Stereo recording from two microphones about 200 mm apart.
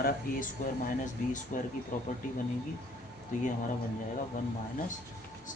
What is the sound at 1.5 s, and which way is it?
Speech, 40° left (ahead or behind).